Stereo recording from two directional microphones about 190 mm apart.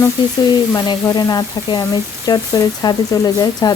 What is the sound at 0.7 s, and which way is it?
Speech, 20° left (ahead or behind).